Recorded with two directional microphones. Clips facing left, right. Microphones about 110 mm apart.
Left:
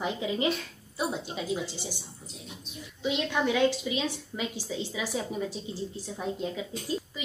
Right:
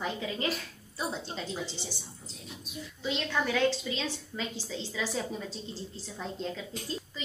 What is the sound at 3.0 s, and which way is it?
A woman's voice, 15° left (ahead or behind).